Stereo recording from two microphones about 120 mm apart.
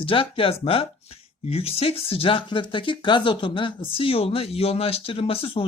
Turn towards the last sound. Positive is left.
turn(degrees=50)  # may be behind; listen again after turning